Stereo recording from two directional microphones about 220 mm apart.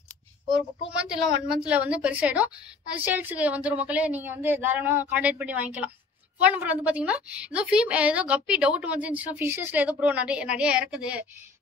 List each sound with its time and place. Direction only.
0.9 s a woman's voice: 5° right (ahead or behind)